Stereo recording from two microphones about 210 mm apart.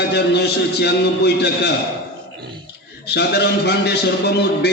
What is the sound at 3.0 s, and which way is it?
A man's voice, 50° left (ahead or behind).